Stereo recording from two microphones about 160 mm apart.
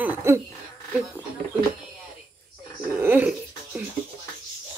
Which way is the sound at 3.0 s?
10° right (ahead or behind).